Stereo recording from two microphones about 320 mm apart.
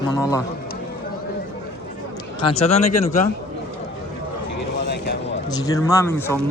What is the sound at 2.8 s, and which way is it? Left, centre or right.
Speech, left.